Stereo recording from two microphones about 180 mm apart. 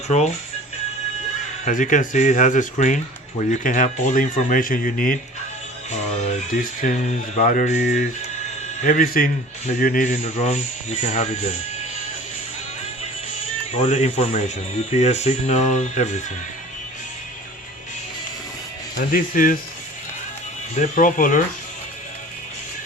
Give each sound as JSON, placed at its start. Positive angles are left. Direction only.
{"t": 1.6, "sound": "speech", "side_deg": 45}
{"t": 6.5, "sound": "speech", "side_deg": 45}
{"t": 13.7, "sound": "speech", "side_deg": 40}
{"t": 18.9, "sound": "speech", "side_deg": 50}
{"t": 20.7, "sound": "speech", "side_deg": 45}